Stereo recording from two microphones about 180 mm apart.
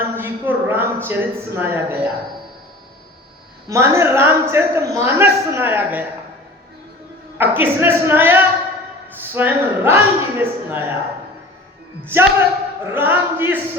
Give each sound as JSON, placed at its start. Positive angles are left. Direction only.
{"t": 0.0, "sound": "a sound", "side_deg": -10}
{"t": 1.0, "sound": "a woman's voice", "side_deg": -10}
{"t": 3.7, "sound": "a woman's voice", "side_deg": -15}
{"t": 7.3, "sound": "a woman's voice", "side_deg": -10}
{"t": 12.0, "sound": "a woman's voice", "side_deg": -15}